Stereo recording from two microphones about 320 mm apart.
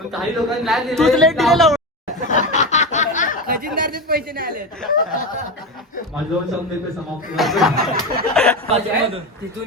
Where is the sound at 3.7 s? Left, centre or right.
Right.